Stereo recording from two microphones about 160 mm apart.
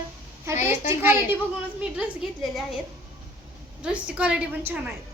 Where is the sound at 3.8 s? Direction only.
5° right (ahead or behind).